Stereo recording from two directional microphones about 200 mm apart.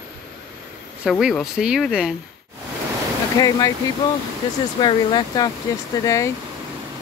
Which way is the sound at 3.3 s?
20° left (ahead or behind).